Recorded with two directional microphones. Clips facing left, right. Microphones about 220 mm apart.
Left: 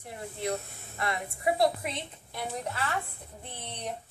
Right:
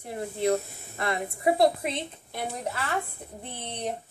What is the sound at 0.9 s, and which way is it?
A woman's voice, 30° right (ahead or behind).